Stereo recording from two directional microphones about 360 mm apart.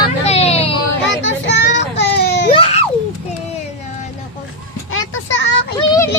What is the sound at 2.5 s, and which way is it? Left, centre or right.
Baby cry, centre.